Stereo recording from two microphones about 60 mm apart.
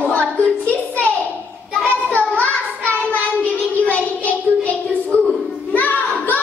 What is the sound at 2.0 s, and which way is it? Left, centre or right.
Child singing, left.